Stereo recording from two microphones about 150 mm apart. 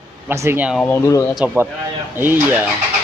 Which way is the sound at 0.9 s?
20° left (ahead or behind).